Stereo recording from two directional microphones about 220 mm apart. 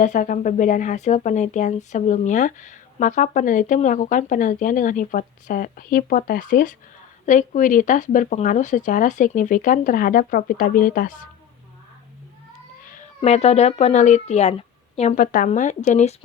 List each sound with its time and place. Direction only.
0.0 s speech: 35° left (ahead or behind)
12.9 s speech: 30° left (ahead or behind)